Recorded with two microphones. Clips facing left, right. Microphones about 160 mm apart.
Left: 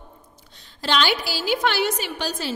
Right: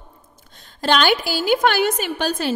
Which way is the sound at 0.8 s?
50° right (ahead or behind).